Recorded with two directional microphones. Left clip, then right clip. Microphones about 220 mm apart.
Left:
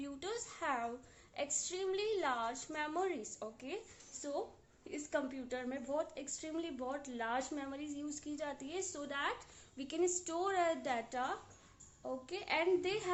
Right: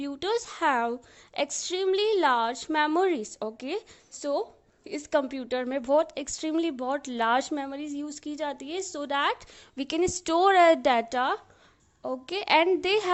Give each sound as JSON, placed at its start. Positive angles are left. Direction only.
{"t": 0.0, "sound": "a woman's voice", "side_deg": -45}